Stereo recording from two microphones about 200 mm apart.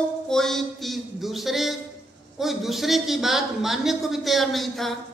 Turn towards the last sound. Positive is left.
turn(degrees=0)  # may be behind; listen again after turning